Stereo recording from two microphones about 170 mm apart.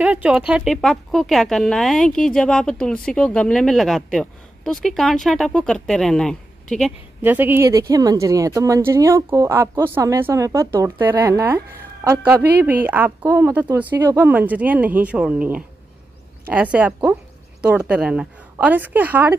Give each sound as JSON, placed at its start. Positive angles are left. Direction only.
{"t": 0.0, "sound": "speech", "side_deg": -5}
{"t": 7.2, "sound": "speech", "side_deg": -10}